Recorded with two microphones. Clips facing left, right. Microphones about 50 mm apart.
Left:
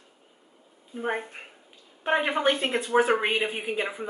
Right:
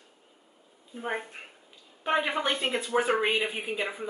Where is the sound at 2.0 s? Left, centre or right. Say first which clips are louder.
Left 3 dB; centre.